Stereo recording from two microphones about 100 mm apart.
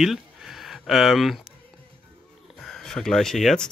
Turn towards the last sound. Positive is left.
turn(degrees=5)  # may be behind; listen again after turning